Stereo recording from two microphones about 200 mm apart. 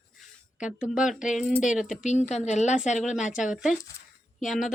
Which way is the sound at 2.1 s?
35° left (ahead or behind).